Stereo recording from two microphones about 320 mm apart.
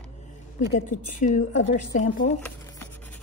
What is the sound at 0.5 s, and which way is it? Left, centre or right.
A woman's voice, left.